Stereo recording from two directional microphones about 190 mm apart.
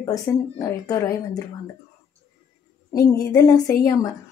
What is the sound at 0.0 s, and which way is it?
A woman's voice, 15° left (ahead or behind).